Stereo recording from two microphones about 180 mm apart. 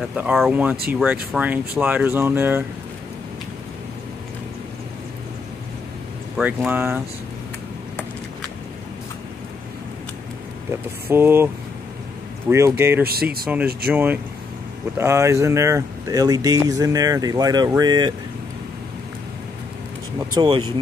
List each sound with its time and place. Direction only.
0.1 s speech: centre (ahead or behind)
6.3 s speech: 10° right (ahead or behind)
10.7 s speech: 10° right (ahead or behind)
13.0 s speech: 55° right (ahead or behind)
13.9 s speech: 10° right (ahead or behind)
20.3 s speech: 25° right (ahead or behind)